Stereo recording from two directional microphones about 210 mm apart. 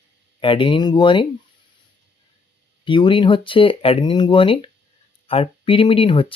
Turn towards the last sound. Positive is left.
turn(degrees=25)  # may be behind; listen again after turning